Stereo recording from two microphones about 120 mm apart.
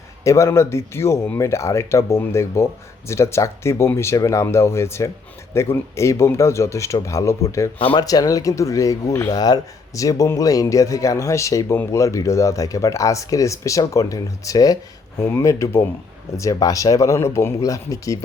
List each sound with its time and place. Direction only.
0.3 s speech: 25° left (ahead or behind)